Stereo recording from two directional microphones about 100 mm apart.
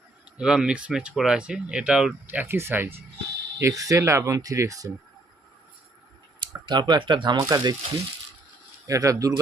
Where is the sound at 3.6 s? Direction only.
35° right (ahead or behind).